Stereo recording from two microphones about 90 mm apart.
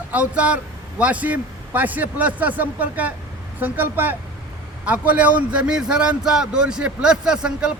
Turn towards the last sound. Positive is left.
turn(degrees=-10)  # may be behind; listen again after turning